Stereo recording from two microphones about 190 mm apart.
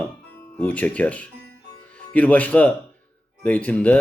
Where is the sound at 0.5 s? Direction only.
10° left (ahead or behind).